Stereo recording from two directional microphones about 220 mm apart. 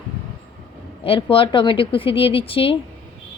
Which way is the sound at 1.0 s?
25° left (ahead or behind).